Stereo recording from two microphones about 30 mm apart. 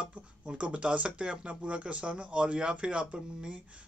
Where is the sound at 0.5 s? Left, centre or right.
Right.